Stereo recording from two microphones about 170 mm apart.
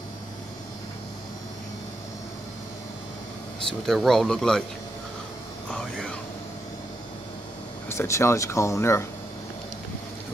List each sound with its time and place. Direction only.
3.8 s speech: centre (ahead or behind)
5.7 s whispering: 5° left (ahead or behind)
7.9 s speech: 15° left (ahead or behind)